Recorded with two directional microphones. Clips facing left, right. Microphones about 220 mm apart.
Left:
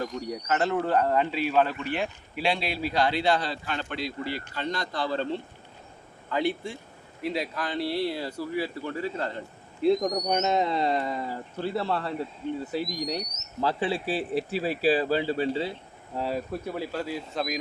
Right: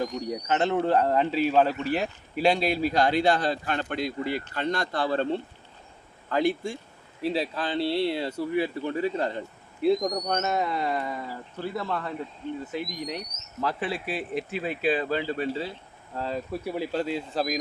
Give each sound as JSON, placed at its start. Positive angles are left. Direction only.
{"t": 0.0, "sound": "a man's voice", "side_deg": -20}
{"t": 6.3, "sound": "a man's voice", "side_deg": -45}
{"t": 7.2, "sound": "speech", "side_deg": -30}
{"t": 9.8, "sound": "speech", "side_deg": 0}
{"t": 10.2, "sound": "speech", "side_deg": 15}
{"t": 16.1, "sound": "speech", "side_deg": 10}
{"t": 16.7, "sound": "speech", "side_deg": -20}
{"t": 17.3, "sound": "speech", "side_deg": -40}